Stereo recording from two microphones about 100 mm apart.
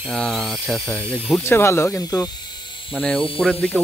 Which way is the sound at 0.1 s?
Centre (ahead or behind).